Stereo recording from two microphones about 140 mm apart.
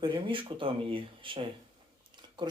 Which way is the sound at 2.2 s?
30° right (ahead or behind).